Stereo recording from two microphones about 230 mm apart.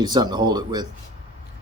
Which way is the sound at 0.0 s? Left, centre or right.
Centre.